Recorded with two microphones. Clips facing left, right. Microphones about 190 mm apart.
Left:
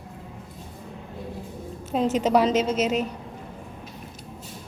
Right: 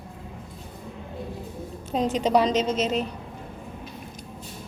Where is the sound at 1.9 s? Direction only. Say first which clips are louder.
Left 1 dB; 5° left (ahead or behind).